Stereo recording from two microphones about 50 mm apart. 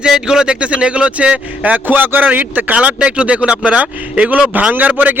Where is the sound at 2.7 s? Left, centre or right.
Right.